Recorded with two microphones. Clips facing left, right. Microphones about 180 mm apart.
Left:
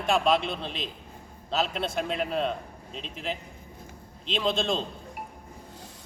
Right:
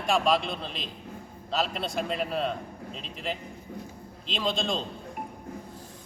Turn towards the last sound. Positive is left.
turn(degrees=0)  # may be behind; listen again after turning